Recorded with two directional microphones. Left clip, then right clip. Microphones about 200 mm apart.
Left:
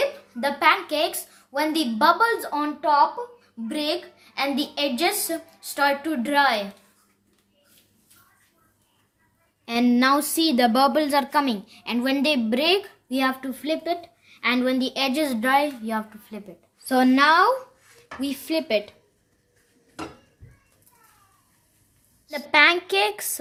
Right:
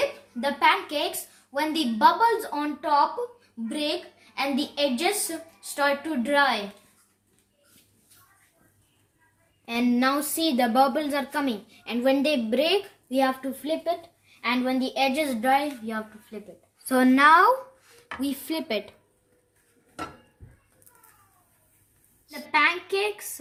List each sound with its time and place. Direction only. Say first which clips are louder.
0.3 s a woman's voice: left 2 dB; 20° left (ahead or behind)
9.6 s a woman's voice: left 4 dB; 40° left (ahead or behind)
16.8 s a woman's voice: left 1 dB; 10° left (ahead or behind)
22.5 s a woman's voice: left 5 dB; 55° left (ahead or behind)